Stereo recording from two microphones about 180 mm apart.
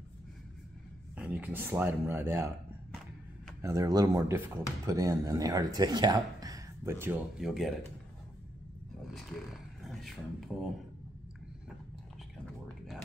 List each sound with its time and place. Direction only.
1.1 s speech: 10° right (ahead or behind)
3.6 s speech: 20° right (ahead or behind)
7.3 s speech: centre (ahead or behind)
9.0 s a sound: centre (ahead or behind)
10.0 s speech: centre (ahead or behind)